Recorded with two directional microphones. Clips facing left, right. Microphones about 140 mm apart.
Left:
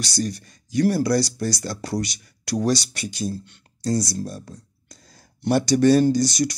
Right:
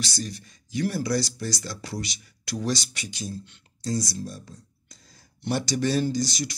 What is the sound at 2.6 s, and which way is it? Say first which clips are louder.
Speech: left 6 dB; 35° left (ahead or behind).